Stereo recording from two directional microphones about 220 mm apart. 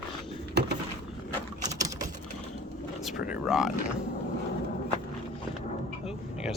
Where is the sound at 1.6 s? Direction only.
15° right (ahead or behind).